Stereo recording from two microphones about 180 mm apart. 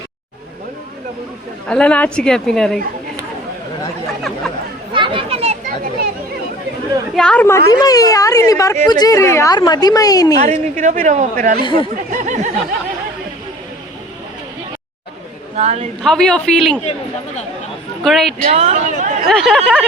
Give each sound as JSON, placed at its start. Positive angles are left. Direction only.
{"t": 1.6, "sound": "a man's voice", "side_deg": 5}
{"t": 4.9, "sound": "speech", "side_deg": -30}
{"t": 7.2, "sound": "speech", "side_deg": 5}
{"t": 10.4, "sound": "a woman's voice", "side_deg": -45}
{"t": 11.6, "sound": "speech", "side_deg": 30}
{"t": 12.1, "sound": "a sound", "side_deg": -45}
{"t": 15.5, "sound": "a woman's voice", "side_deg": -35}
{"t": 16.0, "sound": "a man's voice", "side_deg": 5}
{"t": 18.0, "sound": "a man's voice", "side_deg": 0}
{"t": 18.4, "sound": "speech", "side_deg": -40}
{"t": 19.3, "sound": "a man's voice", "side_deg": 0}